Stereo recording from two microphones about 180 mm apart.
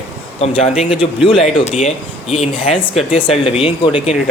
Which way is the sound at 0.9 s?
5° right (ahead or behind).